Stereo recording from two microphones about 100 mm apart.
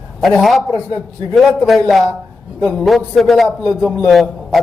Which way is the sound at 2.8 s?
Centre (ahead or behind).